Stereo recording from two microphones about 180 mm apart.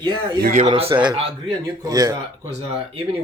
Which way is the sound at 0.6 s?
35° right (ahead or behind).